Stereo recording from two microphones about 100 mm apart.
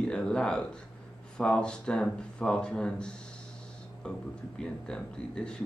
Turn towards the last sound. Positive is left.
turn(degrees=10)  # may be behind; listen again after turning